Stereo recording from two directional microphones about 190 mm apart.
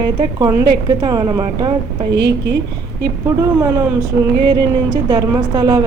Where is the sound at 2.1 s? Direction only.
65° right (ahead or behind).